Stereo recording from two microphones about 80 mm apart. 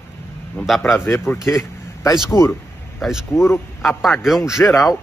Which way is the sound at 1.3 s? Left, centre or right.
Left.